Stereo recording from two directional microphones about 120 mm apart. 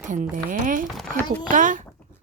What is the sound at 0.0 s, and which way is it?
Speech, 90° right.